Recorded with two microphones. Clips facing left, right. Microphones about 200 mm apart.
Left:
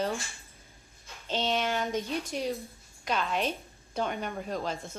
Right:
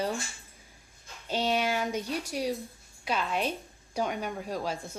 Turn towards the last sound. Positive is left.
turn(degrees=-5)  # may be behind; listen again after turning